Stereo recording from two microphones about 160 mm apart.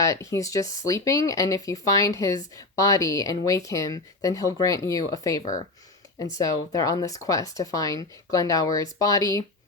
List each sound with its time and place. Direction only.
0.0 s speech: 20° left (ahead or behind)